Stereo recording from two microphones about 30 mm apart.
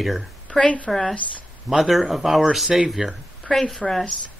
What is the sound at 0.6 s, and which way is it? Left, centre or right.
Speech, left.